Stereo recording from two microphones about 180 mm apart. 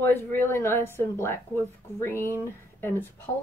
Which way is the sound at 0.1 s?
10° left (ahead or behind).